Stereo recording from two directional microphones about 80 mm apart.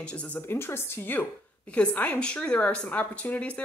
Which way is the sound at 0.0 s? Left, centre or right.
Centre.